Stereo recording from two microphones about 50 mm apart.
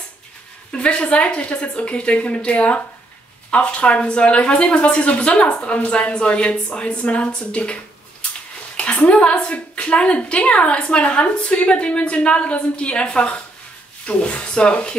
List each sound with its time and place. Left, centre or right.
0.7 s a woman's voice: centre